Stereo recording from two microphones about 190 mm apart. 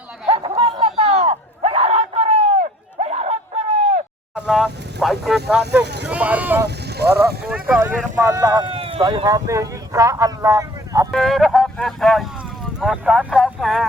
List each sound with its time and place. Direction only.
0.3 s a sound: 30° right (ahead or behind)
4.4 s speech: centre (ahead or behind)
5.8 s speech: 60° right (ahead or behind)
6.1 s speech: 5° right (ahead or behind)
6.7 s speech: 60° right (ahead or behind)
7.5 s speech: 10° right (ahead or behind)
11.1 s speech: centre (ahead or behind)